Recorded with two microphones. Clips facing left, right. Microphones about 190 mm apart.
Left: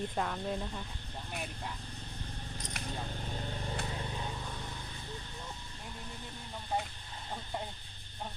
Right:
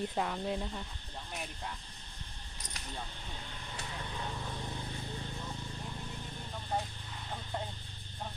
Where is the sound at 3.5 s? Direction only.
40° left (ahead or behind).